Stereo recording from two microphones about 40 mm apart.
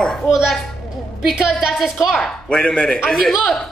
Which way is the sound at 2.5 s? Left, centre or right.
Left.